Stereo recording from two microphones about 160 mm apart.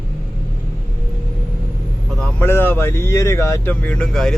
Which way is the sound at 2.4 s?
15° left (ahead or behind).